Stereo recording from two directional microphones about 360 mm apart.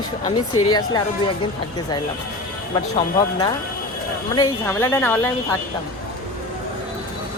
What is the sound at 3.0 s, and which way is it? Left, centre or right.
Speech, centre.